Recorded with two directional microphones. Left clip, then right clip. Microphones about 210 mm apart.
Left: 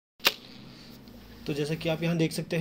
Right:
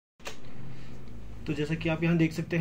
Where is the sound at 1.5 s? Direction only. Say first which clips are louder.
Left 1 dB; 35° left (ahead or behind).